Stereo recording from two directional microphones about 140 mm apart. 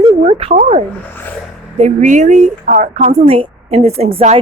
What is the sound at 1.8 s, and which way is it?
A woman's voice, 55° right (ahead or behind).